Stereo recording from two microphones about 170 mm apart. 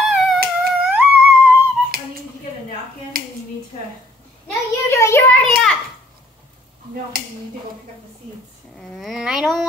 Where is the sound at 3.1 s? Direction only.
60° right (ahead or behind).